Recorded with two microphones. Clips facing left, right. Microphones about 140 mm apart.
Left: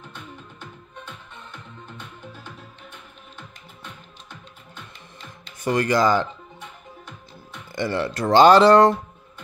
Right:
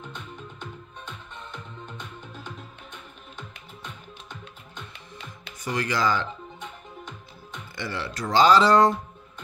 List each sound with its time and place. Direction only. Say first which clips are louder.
5.6 s speech: left 7 dB; 50° left (ahead or behind)
7.7 s speech: left 8 dB; 50° left (ahead or behind); by 8.9 s 65° left (ahead or behind)